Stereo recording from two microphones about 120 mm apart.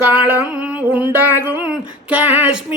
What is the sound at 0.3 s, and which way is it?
A man's voice, 15° right (ahead or behind).